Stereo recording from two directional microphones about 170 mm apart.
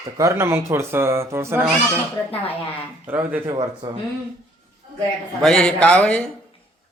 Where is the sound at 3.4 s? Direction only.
25° right (ahead or behind).